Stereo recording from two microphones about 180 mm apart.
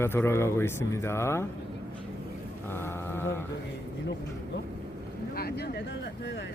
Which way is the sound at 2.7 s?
15° left (ahead or behind).